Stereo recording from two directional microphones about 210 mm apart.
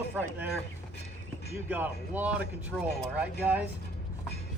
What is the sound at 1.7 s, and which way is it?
Speech, 10° right (ahead or behind).